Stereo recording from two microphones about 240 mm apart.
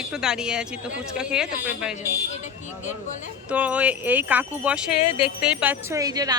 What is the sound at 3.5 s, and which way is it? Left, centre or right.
Speech, centre.